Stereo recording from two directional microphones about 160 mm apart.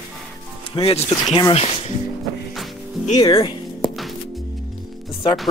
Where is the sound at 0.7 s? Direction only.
35° left (ahead or behind).